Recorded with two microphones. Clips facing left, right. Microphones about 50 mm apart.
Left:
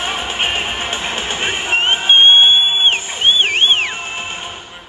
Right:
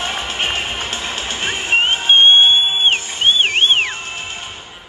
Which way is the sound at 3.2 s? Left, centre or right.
Centre.